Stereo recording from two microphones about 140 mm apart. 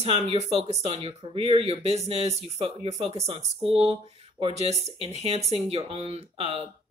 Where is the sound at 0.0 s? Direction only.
45° right (ahead or behind).